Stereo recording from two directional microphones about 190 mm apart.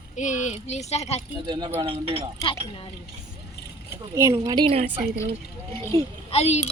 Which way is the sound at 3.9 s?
15° right (ahead or behind).